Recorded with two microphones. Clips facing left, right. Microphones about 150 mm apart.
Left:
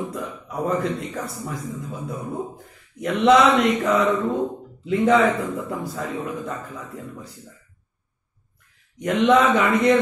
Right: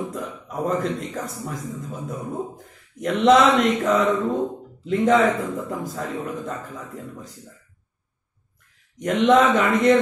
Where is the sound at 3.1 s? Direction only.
45° right (ahead or behind).